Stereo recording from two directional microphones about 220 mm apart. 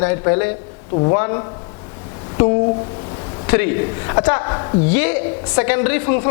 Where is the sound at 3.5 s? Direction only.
15° left (ahead or behind).